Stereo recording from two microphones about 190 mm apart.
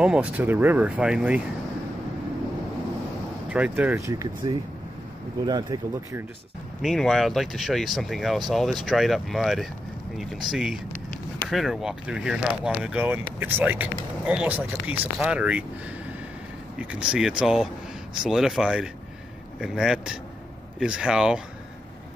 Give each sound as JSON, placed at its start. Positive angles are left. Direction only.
{"t": 0.0, "sound": "speech", "side_deg": -5}
{"t": 3.4, "sound": "speech", "side_deg": -5}
{"t": 6.8, "sound": "speech", "side_deg": 0}
{"t": 16.7, "sound": "speech", "side_deg": -5}